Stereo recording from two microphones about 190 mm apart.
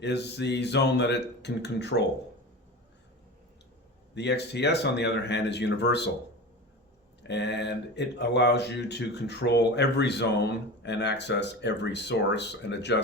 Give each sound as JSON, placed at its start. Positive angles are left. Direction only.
{"t": 0.0, "sound": "speech", "side_deg": 65}
{"t": 4.1, "sound": "speech", "side_deg": 65}
{"t": 7.2, "sound": "speech", "side_deg": 65}